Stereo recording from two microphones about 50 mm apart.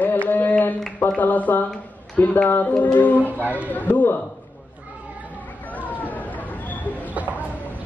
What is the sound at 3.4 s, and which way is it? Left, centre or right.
Speech, right.